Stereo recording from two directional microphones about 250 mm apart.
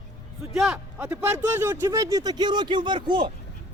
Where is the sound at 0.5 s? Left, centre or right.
Centre.